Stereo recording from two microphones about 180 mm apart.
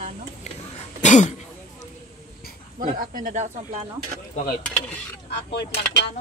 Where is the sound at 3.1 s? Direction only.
50° right (ahead or behind).